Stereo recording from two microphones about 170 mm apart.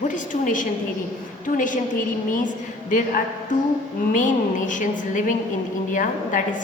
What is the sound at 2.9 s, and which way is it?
A woman's voice, 50° left (ahead or behind).